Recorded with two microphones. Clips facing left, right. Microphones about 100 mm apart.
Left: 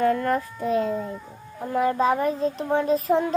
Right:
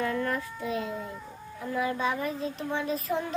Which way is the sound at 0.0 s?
45° left (ahead or behind).